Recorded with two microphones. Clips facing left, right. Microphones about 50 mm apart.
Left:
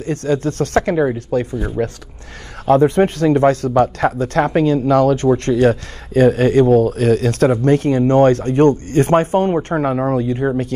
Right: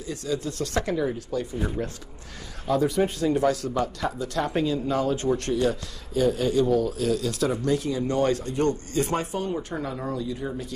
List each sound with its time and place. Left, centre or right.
0.0 s speech: left